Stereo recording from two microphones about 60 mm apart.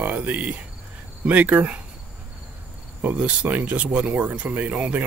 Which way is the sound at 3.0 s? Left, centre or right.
Right.